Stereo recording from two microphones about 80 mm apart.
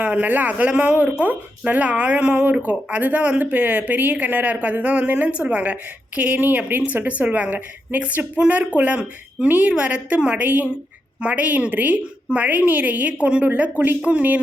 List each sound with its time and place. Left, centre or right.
0.0 s a woman's voice: centre